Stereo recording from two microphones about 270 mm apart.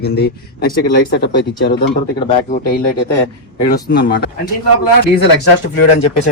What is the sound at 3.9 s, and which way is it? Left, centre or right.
Speech, left.